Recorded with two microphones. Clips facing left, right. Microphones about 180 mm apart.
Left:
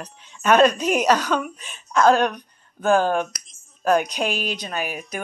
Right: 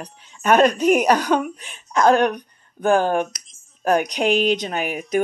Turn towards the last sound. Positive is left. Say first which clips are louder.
# right 6 dB
turn(degrees=-20)  # may be behind; listen again after turning